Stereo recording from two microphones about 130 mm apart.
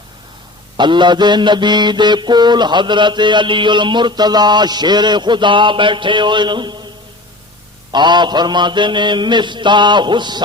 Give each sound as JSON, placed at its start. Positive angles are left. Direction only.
{"t": 0.8, "sound": "mantra", "side_deg": -35}
{"t": 7.9, "sound": "mantra", "side_deg": -35}